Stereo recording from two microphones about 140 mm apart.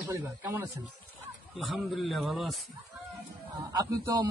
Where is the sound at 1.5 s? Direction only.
Centre (ahead or behind).